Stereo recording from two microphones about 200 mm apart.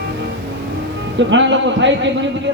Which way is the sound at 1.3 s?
65° right (ahead or behind).